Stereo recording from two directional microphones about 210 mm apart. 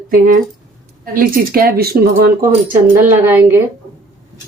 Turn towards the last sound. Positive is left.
turn(degrees=-10)  # may be behind; listen again after turning